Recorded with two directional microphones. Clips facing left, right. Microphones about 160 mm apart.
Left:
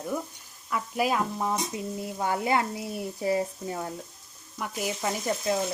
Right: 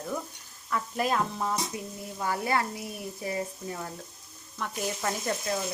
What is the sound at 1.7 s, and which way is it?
Speech, 25° left (ahead or behind).